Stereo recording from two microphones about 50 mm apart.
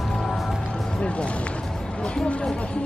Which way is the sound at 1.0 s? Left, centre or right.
Left.